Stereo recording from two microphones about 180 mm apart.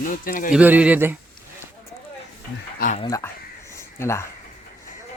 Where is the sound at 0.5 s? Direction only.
10° right (ahead or behind).